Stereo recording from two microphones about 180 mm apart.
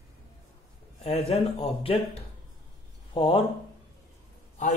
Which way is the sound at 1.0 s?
35° left (ahead or behind).